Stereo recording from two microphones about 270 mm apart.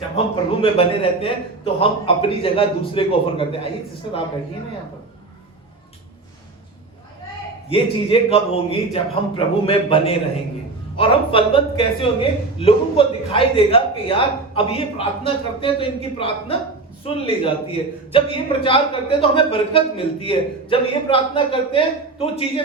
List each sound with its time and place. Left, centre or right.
0.6 s a man's voice: left
7.7 s a man's voice: centre